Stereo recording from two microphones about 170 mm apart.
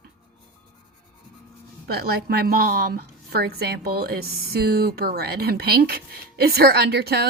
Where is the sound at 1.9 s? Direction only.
65° right (ahead or behind).